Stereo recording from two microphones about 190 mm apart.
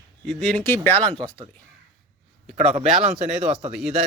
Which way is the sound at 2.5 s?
35° right (ahead or behind).